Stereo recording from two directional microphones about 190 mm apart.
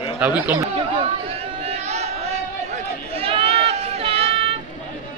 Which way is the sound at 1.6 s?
35° right (ahead or behind).